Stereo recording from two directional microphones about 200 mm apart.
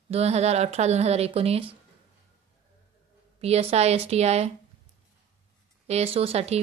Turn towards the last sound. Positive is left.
turn(degrees=-30)  # may be behind; listen again after turning